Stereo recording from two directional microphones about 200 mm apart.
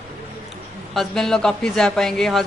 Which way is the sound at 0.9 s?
5° left (ahead or behind).